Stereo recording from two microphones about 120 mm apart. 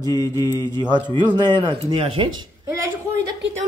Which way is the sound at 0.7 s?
35° right (ahead or behind).